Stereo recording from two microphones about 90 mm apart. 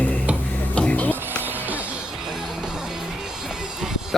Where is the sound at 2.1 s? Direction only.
5° right (ahead or behind).